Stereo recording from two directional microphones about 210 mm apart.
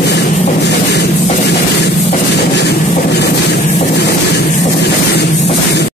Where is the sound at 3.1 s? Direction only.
55° left (ahead or behind).